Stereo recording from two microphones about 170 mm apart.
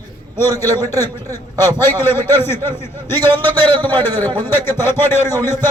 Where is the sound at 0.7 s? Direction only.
20° right (ahead or behind).